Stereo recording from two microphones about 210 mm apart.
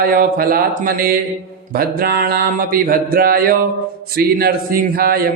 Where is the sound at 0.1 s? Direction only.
45° right (ahead or behind).